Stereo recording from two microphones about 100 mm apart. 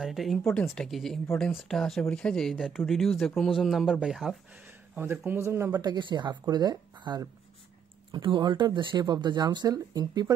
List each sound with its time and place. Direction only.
0.0 s speech: centre (ahead or behind)
4.9 s speech: 20° right (ahead or behind)
5.8 s speech: 45° right (ahead or behind)